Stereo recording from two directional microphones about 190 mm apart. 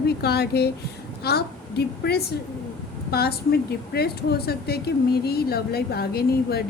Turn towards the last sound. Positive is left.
turn(degrees=55)  # may be behind; listen again after turning